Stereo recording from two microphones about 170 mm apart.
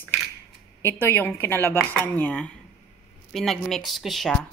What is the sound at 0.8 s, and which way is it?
A woman's voice, 15° left (ahead or behind).